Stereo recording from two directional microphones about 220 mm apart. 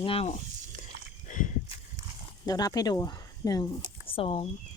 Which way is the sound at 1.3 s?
35° left (ahead or behind).